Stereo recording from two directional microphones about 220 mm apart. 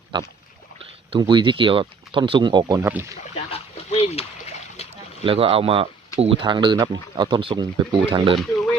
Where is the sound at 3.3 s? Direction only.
30° left (ahead or behind).